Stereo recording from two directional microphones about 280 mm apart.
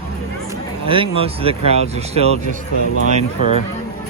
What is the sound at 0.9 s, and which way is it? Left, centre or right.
Speech, centre.